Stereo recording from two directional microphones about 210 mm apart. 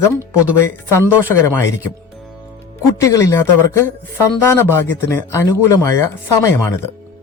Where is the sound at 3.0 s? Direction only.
15° left (ahead or behind).